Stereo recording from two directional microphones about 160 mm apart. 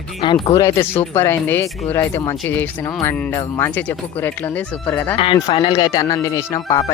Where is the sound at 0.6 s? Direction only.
20° left (ahead or behind).